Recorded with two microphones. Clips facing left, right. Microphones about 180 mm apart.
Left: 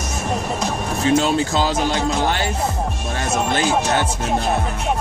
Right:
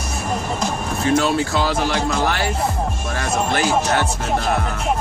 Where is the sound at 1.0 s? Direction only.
20° left (ahead or behind).